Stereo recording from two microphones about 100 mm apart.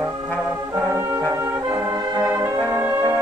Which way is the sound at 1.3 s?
25° right (ahead or behind).